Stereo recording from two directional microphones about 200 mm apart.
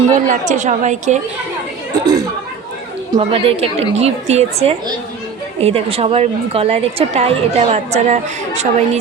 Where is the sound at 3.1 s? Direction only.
30° right (ahead or behind).